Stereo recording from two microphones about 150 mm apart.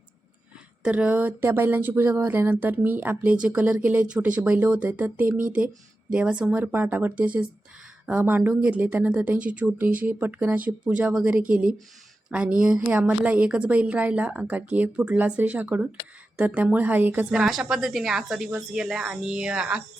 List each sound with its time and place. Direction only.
0.8 s a woman's voice: 10° right (ahead or behind)
11.4 s speech: 65° right (ahead or behind)
12.5 s a woman's voice: 5° right (ahead or behind)